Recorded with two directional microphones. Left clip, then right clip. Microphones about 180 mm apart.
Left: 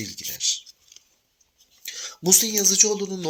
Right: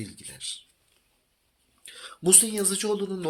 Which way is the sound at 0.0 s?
25° left (ahead or behind).